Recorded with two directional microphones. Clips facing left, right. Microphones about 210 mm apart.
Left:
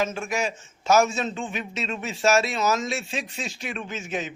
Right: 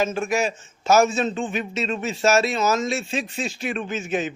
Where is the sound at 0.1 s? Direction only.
50° right (ahead or behind).